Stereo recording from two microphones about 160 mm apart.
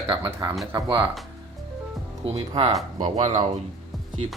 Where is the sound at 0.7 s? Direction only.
25° right (ahead or behind).